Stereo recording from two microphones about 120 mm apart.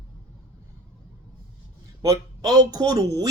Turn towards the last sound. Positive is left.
turn(degrees=-30)  # may be behind; listen again after turning